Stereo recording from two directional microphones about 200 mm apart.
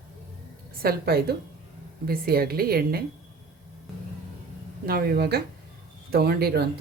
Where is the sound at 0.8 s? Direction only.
50° right (ahead or behind).